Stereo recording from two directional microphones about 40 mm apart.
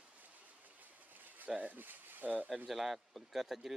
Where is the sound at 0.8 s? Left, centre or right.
Right.